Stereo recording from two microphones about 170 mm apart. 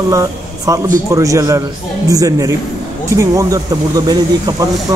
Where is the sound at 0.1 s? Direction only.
20° right (ahead or behind).